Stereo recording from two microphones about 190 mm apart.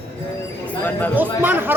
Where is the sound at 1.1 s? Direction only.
10° right (ahead or behind).